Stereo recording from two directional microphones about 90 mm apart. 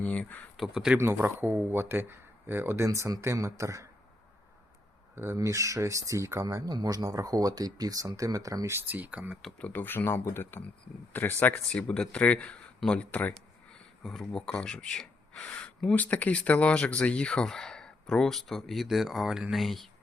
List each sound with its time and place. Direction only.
0.0 s speech: 15° left (ahead or behind)
0.5 s speech: 5° right (ahead or behind)
0.9 s speech: 30° right (ahead or behind)
5.1 s speech: 30° right (ahead or behind)
8.9 s speech: 15° right (ahead or behind)
9.6 s speech: 20° left (ahead or behind)
13.3 s speech: 5° left (ahead or behind)